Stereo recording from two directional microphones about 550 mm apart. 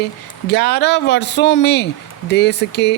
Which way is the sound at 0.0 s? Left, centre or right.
Centre.